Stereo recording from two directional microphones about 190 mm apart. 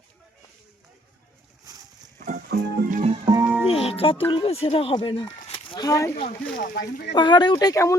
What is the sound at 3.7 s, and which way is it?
Speech, 30° left (ahead or behind).